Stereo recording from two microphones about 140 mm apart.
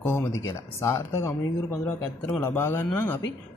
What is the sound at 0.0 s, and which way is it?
Speech, 20° left (ahead or behind).